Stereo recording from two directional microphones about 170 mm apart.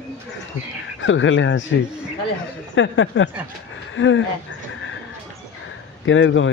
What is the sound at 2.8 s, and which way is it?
Speech, 90° left.